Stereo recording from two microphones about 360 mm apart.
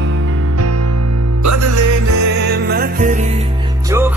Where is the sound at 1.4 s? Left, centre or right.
Right.